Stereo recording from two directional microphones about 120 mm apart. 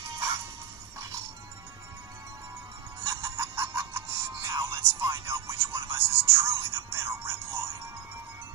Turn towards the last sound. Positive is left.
turn(degrees=-20)  # may be behind; listen again after turning